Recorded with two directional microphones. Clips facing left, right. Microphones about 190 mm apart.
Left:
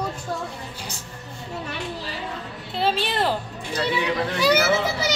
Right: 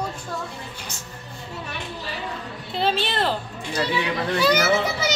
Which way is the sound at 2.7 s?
5° left (ahead or behind).